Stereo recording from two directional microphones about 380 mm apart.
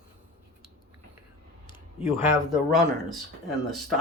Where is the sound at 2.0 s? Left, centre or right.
Centre.